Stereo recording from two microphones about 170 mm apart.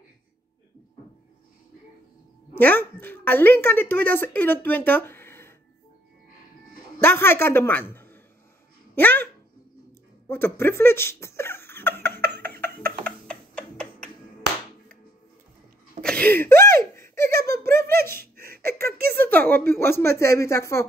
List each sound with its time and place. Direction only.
2.5 s a woman's voice: 10° left (ahead or behind)
7.0 s a woman's voice: 15° left (ahead or behind)
10.2 s a sound: 15° left (ahead or behind)
12.4 s a sound: 65° right (ahead or behind)
13.0 s tick-tock: 5° left (ahead or behind)
16.0 s speech: 5° left (ahead or behind)
18.1 s laughter: 65° right (ahead or behind)
19.1 s a woman's voice: 10° left (ahead or behind)